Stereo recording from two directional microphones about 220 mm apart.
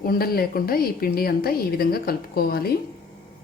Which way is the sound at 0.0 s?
45° left (ahead or behind).